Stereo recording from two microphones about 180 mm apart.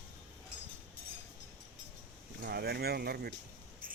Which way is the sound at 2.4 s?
60° right (ahead or behind).